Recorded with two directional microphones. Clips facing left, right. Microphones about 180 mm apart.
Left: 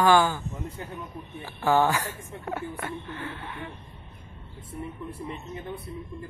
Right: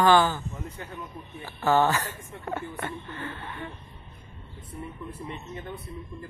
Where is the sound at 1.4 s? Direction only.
10° left (ahead or behind).